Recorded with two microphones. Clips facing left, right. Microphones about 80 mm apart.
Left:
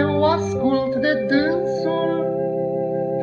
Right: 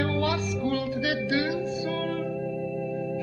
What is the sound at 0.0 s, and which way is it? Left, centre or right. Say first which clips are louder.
Music: left 9 dB; left.